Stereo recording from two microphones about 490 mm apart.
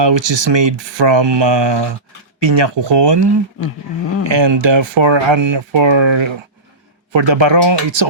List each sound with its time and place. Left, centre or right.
0.0 s speech: right